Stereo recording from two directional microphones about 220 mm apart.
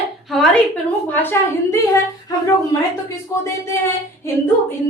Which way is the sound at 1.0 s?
10° left (ahead or behind).